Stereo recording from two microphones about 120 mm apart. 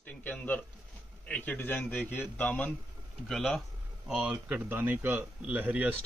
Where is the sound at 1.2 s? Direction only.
10° left (ahead or behind); by 6.0 s 15° right (ahead or behind).